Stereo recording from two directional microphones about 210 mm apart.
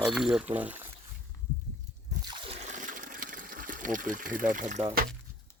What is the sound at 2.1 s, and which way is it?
Trickle, 20° right (ahead or behind).